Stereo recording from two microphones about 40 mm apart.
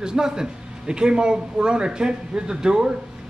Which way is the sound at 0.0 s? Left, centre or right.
Centre.